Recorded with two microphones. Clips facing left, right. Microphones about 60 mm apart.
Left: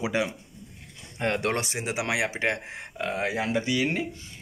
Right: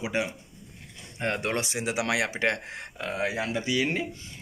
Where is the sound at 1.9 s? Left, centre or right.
Left.